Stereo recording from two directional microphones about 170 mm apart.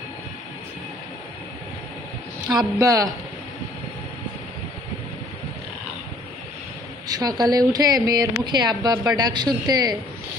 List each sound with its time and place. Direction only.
2.6 s speech: 20° right (ahead or behind)
7.1 s speech: 25° right (ahead or behind)